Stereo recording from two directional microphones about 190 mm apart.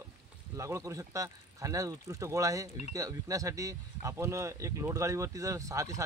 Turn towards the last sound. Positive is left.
turn(degrees=-15)  # may be behind; listen again after turning